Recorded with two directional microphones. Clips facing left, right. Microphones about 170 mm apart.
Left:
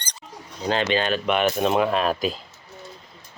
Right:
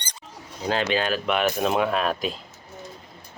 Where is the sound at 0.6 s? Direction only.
5° right (ahead or behind).